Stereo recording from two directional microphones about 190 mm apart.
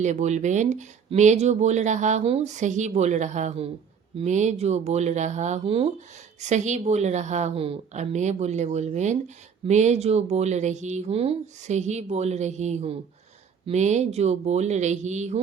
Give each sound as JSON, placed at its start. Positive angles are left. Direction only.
{"t": 0.0, "sound": "a woman's voice", "side_deg": -40}